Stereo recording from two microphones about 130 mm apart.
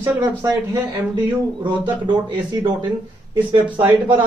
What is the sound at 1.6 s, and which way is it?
Speech, 35° right (ahead or behind).